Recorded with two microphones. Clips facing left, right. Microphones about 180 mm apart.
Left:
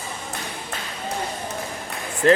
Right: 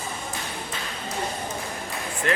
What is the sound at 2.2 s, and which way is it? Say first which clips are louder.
Speech: left 10 dB; 35° left (ahead or behind).